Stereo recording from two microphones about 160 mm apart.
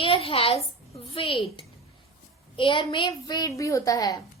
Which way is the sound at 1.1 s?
35° left (ahead or behind).